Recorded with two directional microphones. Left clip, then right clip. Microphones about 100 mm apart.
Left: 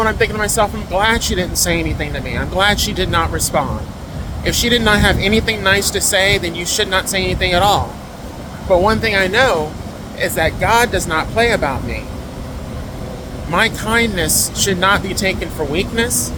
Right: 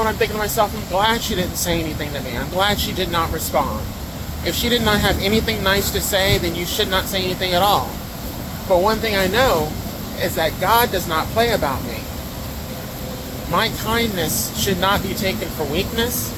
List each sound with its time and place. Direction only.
0.0 s speech: 55° left (ahead or behind)
4.4 s speech: 70° left (ahead or behind)
8.7 s speech: 70° left (ahead or behind)
13.5 s speech: 65° left (ahead or behind)